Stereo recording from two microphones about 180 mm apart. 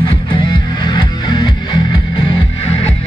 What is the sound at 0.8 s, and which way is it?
Music, 25° left (ahead or behind).